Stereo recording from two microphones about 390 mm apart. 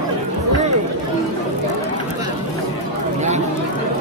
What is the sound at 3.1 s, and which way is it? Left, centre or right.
Chatter, centre.